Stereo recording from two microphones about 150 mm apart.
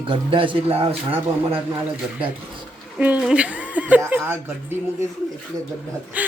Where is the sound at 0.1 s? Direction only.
35° right (ahead or behind).